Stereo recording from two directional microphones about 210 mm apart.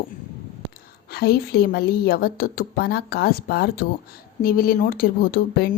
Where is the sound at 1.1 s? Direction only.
50° left (ahead or behind).